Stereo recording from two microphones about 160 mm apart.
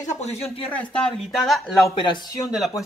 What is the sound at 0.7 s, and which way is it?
Speech, centre (ahead or behind).